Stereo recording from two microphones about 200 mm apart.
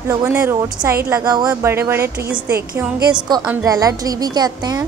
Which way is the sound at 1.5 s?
10° right (ahead or behind).